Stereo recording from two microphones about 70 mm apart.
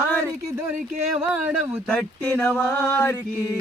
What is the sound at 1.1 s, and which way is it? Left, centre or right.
Speech, right.